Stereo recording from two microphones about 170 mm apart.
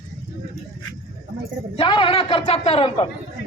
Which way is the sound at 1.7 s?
30° left (ahead or behind).